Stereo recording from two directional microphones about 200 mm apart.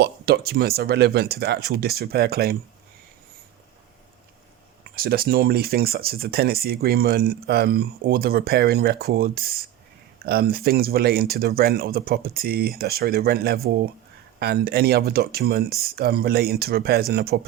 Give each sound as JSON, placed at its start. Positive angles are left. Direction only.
{"t": 0.0, "sound": "speech", "side_deg": -55}
{"t": 4.8, "sound": "speech", "side_deg": -50}